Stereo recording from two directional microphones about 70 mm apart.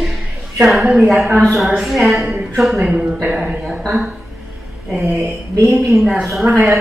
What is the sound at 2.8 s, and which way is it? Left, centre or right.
Speech, centre.